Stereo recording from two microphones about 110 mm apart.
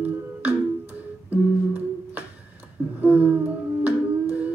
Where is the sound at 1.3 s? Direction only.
15° right (ahead or behind).